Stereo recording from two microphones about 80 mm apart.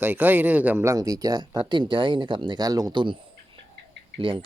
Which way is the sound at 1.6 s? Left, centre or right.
Right.